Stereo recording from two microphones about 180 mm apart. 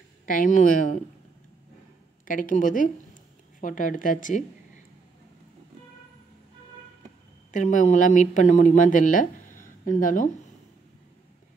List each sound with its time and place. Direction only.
0.3 s speech: 45° left (ahead or behind)
2.2 s speech: 50° left (ahead or behind)
7.5 s speech: 40° left (ahead or behind)